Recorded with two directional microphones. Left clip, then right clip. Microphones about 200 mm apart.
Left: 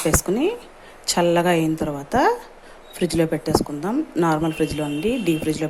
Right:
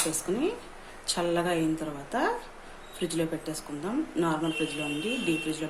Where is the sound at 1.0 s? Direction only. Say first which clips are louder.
Left 10 dB; 35° left (ahead or behind).